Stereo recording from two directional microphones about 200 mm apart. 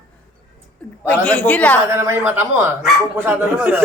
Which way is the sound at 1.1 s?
5° left (ahead or behind).